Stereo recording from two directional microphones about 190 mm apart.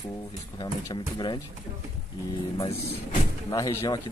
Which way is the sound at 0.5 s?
25° left (ahead or behind).